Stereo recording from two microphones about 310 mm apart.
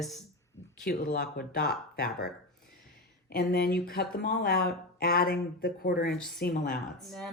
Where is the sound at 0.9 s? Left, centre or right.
Left.